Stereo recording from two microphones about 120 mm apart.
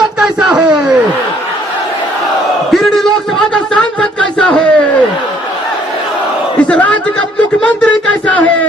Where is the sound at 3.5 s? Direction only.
10° left (ahead or behind).